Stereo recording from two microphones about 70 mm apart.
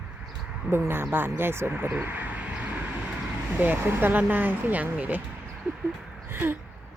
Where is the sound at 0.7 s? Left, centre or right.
Right.